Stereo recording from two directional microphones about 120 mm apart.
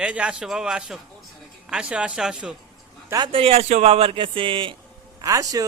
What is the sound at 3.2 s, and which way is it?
A man's voice, 50° right (ahead or behind).